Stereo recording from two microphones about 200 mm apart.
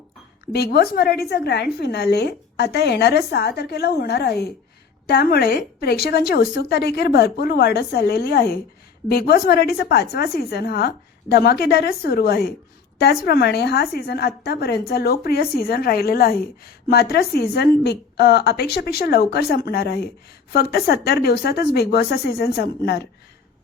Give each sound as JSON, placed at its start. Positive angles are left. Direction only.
{"t": 0.4, "sound": "a woman's voice", "side_deg": 55}